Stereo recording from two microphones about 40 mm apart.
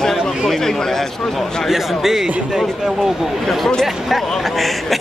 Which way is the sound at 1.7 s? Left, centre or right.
Centre.